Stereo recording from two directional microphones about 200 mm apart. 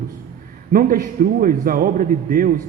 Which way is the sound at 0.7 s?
45° right (ahead or behind).